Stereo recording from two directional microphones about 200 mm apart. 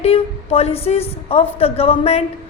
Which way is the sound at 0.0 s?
30° left (ahead or behind).